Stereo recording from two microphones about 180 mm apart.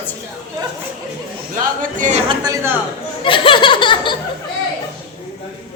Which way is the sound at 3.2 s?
30° left (ahead or behind).